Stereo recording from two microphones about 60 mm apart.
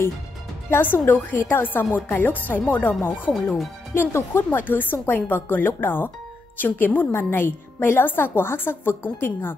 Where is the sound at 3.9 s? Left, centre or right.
Left.